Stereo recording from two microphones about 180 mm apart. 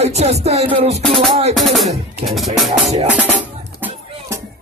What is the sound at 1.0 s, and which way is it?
Music, centre (ahead or behind).